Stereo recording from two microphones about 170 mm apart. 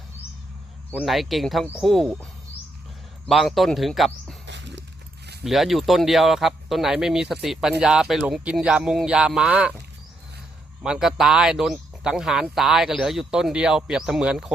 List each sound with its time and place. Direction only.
0.9 s speech: 5° right (ahead or behind)
3.2 s speech: centre (ahead or behind)
4.4 s a sound: 90° right
5.4 s speech: centre (ahead or behind)
10.8 s speech: 5° right (ahead or behind)